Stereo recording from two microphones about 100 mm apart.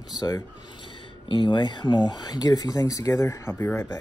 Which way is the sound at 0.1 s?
40° left (ahead or behind).